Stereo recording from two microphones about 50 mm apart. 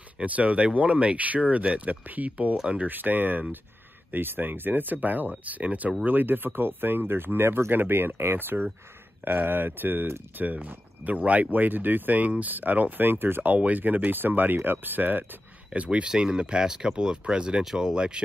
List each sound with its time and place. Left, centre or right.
0.2 s speech: right
2.5 s speech: centre
2.8 s speech: right
6.0 s speech: right
15.7 s speech: right